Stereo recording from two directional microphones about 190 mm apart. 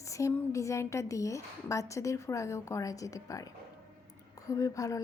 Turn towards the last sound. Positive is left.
turn(degrees=15)  # may be behind; listen again after turning